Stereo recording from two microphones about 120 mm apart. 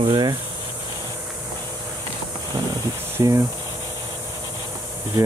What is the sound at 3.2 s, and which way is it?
Speech, 30° right (ahead or behind).